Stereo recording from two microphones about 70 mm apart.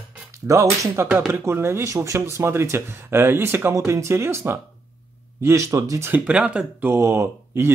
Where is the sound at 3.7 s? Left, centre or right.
Right.